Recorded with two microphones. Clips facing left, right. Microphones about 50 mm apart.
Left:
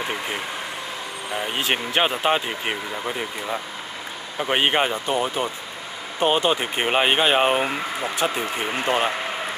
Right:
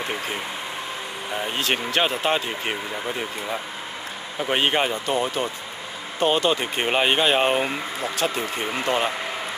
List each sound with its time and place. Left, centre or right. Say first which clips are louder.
1.4 s speech: left 1 dB; centre
4.4 s speech: left 1 dB; centre